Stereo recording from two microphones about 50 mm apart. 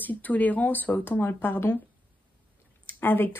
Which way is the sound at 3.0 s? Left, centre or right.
Left.